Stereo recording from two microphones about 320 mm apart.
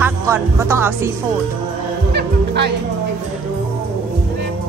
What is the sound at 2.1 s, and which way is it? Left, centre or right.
Speech, right.